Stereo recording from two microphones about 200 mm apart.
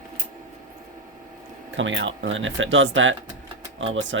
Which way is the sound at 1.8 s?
70° right (ahead or behind).